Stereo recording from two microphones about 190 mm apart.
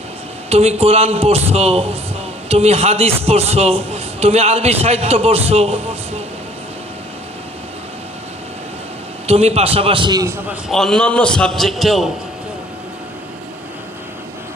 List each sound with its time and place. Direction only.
0.5 s a man's voice: 35° right (ahead or behind)
9.2 s a man's voice: 35° right (ahead or behind); by 10.6 s 15° right (ahead or behind)
10.7 s a man's voice: centre (ahead or behind)